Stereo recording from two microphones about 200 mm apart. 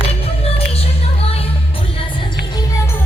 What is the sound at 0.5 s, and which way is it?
Music, 30° left (ahead or behind).